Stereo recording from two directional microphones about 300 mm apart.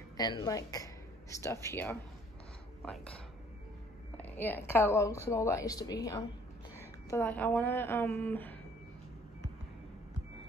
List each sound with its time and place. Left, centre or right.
0.2 s a woman's voice: centre
4.2 s a woman's voice: centre
7.1 s a woman's voice: centre